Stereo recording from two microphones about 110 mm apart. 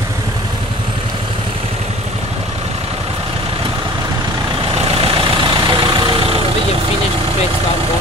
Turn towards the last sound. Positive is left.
turn(degrees=-55)  # may be behind; listen again after turning